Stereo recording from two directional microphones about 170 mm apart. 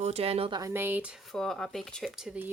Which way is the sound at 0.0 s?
40° right (ahead or behind).